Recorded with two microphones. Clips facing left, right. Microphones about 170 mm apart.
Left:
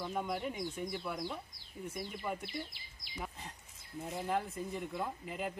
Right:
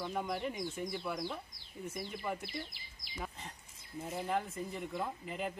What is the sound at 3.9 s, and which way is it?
Speech, centre (ahead or behind).